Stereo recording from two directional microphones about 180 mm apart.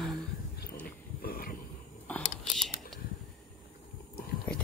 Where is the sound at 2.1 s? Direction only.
10° left (ahead or behind).